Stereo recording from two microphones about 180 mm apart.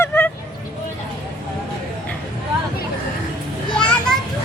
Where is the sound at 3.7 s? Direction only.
5° left (ahead or behind).